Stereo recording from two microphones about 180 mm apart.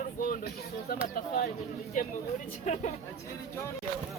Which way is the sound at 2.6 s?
40° left (ahead or behind).